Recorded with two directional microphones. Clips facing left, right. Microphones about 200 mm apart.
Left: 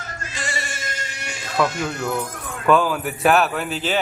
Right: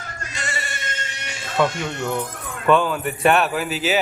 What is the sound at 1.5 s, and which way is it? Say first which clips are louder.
Speech: even; 5° left (ahead or behind).